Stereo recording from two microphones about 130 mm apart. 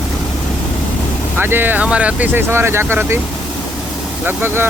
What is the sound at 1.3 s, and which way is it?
Speech, 15° right (ahead or behind).